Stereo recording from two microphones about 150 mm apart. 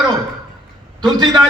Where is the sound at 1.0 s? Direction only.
25° right (ahead or behind).